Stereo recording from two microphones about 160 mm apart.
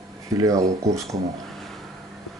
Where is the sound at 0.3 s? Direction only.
20° right (ahead or behind).